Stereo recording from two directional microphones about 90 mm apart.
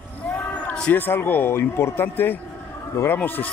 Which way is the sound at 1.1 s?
20° left (ahead or behind).